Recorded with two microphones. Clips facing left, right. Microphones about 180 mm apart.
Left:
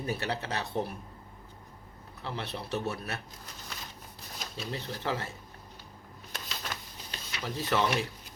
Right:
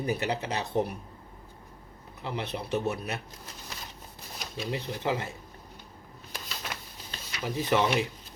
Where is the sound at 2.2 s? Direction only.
20° right (ahead or behind).